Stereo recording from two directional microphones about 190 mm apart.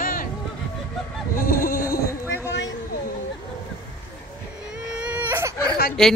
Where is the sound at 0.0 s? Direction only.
45° left (ahead or behind).